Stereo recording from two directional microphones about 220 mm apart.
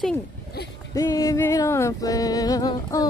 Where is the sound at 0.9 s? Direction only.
15° left (ahead or behind).